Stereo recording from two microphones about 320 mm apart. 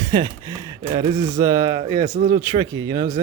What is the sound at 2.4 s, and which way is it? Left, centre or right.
Speech, centre.